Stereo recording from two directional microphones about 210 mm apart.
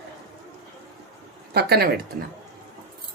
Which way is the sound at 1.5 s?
50° right (ahead or behind).